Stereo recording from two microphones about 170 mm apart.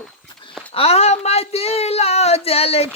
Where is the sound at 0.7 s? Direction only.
35° left (ahead or behind).